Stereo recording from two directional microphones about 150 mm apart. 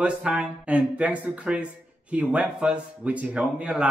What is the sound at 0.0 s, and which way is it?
Speech, 5° right (ahead or behind).